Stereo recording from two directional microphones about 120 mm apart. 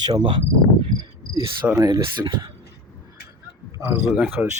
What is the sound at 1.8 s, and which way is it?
Speech, 30° right (ahead or behind).